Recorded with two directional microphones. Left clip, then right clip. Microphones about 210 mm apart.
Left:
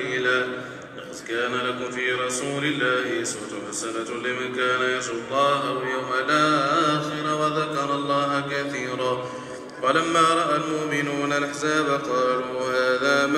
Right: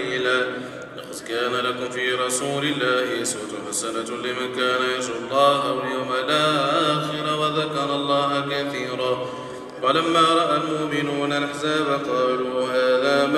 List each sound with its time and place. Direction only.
0.1 s a sound: 30° right (ahead or behind)
1.3 s music: 40° right (ahead or behind)
4.3 s mantra: 35° right (ahead or behind); by 9.1 s 5° left (ahead or behind)
9.8 s mantra: 15° left (ahead or behind); by 13.4 s 30° left (ahead or behind)